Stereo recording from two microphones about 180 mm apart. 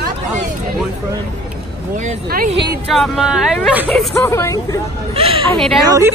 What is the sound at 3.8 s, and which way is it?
Speech, 10° left (ahead or behind).